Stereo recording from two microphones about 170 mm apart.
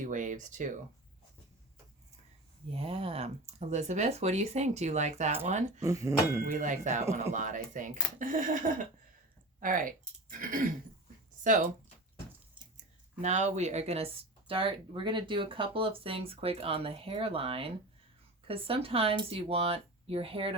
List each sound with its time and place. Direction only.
0.0 s speech: 50° right (ahead or behind)
2.6 s speech: 35° right (ahead or behind)
5.8 s speech: 20° right (ahead or behind)
6.4 s speech: 50° right (ahead or behind)
13.2 s speech: 45° right (ahead or behind)